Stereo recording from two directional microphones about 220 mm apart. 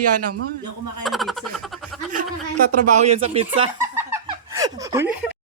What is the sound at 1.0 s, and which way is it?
Speech, centre (ahead or behind).